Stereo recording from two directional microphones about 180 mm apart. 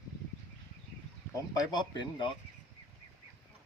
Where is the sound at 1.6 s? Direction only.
25° left (ahead or behind).